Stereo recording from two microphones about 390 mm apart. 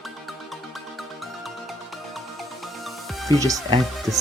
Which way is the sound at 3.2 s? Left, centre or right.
Centre.